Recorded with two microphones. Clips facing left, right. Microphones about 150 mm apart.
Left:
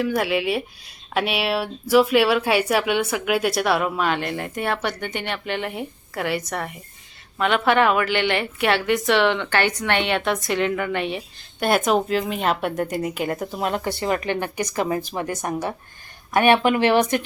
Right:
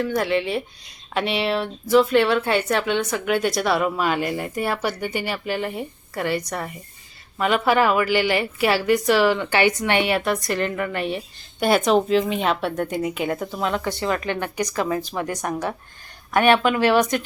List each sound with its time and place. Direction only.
0.0 s speech: 5° left (ahead or behind)
13.5 s speech: 45° left (ahead or behind)
14.1 s speech: 20° left (ahead or behind)